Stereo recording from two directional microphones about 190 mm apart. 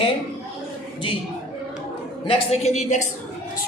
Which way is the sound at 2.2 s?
30° left (ahead or behind).